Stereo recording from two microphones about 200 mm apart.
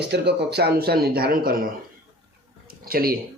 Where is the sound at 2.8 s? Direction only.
50° right (ahead or behind).